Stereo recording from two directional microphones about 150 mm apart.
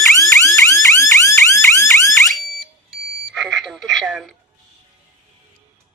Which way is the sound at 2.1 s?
Centre (ahead or behind).